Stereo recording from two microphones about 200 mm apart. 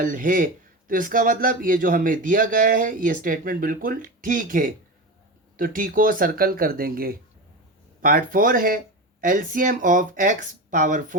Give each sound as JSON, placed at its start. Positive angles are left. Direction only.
{"t": 0.0, "sound": "speech", "side_deg": -40}